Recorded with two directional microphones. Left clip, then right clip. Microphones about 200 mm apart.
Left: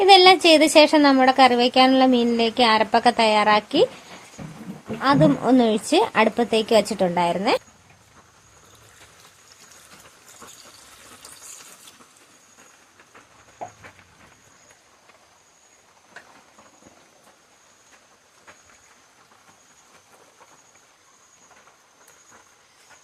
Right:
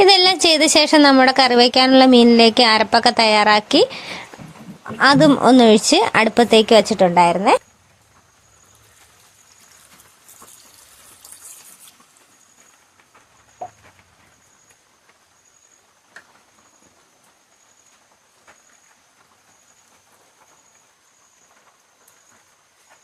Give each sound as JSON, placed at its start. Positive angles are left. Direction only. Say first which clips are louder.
{"t": 0.0, "sound": "a woman's voice", "louder": "even", "side_deg": -30}
{"t": 4.9, "sound": "a woman's voice", "louder": "right 6 dB", "side_deg": -30}